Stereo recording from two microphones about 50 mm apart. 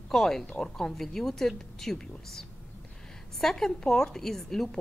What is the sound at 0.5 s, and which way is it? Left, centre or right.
Speech, centre.